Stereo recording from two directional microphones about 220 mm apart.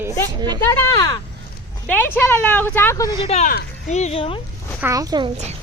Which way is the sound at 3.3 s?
30° left (ahead or behind).